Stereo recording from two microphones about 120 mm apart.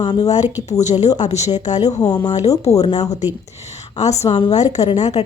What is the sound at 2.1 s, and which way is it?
Speech, 30° left (ahead or behind).